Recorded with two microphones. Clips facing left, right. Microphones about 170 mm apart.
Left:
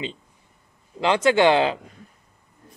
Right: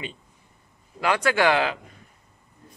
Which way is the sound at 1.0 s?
25° left (ahead or behind).